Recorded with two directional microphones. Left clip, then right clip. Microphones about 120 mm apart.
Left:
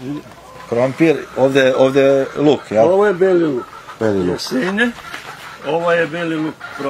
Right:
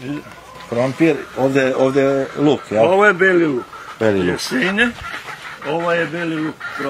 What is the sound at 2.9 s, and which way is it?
Speech, 30° right (ahead or behind).